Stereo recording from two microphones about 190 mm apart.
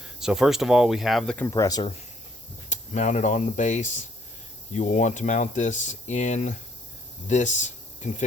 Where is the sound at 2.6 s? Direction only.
40° left (ahead or behind).